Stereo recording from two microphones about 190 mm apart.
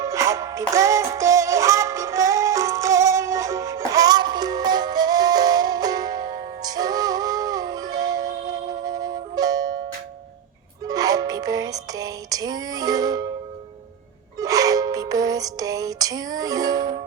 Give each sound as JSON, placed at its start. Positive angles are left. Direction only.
{"t": 0.0, "sound": "music", "side_deg": -15}
{"t": 10.8, "sound": "music", "side_deg": -20}
{"t": 14.3, "sound": "music", "side_deg": -20}